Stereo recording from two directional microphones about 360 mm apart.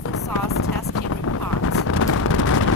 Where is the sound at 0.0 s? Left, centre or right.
Left.